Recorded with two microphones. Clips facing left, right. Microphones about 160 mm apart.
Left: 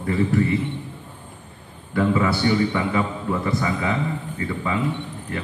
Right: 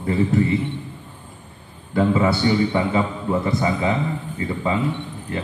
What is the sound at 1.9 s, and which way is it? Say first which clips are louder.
A man's voice: right 2 dB; 25° right (ahead or behind).